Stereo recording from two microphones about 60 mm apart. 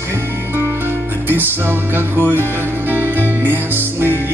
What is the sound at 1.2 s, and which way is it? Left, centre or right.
Music, right.